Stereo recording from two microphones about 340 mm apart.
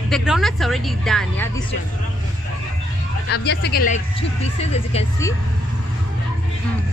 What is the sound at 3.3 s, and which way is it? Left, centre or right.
A woman's voice, left.